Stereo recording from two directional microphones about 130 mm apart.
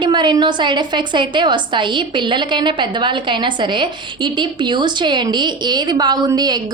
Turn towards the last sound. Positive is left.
turn(degrees=-30)  # may be behind; listen again after turning